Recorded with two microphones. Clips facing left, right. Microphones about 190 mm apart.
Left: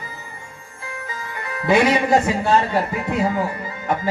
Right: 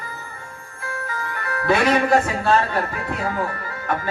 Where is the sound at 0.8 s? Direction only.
15° left (ahead or behind).